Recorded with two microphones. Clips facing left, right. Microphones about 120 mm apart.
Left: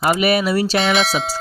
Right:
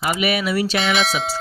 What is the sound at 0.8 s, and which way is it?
Speech, centre (ahead or behind).